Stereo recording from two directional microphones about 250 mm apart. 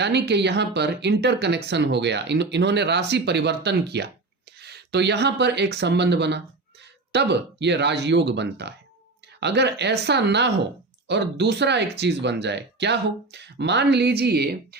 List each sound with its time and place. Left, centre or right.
0.0 s speech: right